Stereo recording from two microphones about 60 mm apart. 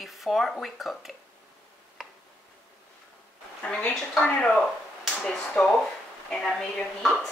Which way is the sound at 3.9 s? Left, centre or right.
Centre.